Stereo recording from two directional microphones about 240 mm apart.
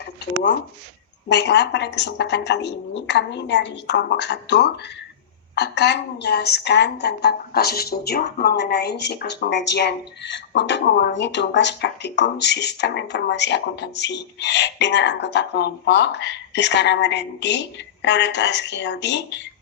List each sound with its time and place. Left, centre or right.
1.3 s a woman's voice: left